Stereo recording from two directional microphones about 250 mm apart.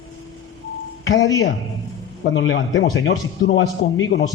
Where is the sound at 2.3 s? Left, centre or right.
Left.